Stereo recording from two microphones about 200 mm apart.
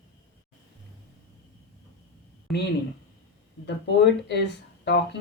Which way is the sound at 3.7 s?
60° left (ahead or behind).